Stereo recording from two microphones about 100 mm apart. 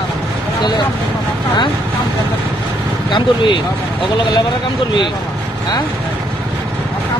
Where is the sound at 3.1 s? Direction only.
55° left (ahead or behind).